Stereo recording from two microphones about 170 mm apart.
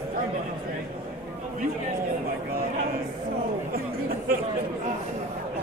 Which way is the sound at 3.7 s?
60° right (ahead or behind).